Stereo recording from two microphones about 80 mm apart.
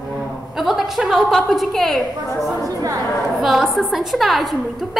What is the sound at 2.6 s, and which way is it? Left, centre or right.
Speech, right.